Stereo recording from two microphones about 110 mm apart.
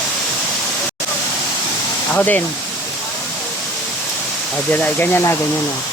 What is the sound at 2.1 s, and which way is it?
Speech, 15° left (ahead or behind).